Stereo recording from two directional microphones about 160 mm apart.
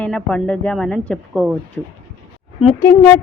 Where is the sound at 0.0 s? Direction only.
5° left (ahead or behind).